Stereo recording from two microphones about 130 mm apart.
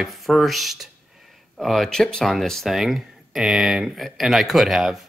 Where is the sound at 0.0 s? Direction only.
Centre (ahead or behind).